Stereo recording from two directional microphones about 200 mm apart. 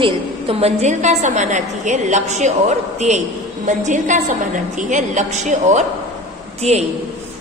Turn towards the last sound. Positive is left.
turn(degrees=-35)  # may be behind; listen again after turning